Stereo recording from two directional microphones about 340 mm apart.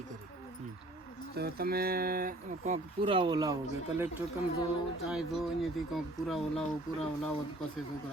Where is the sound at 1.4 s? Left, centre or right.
Right; by 3.5 s centre.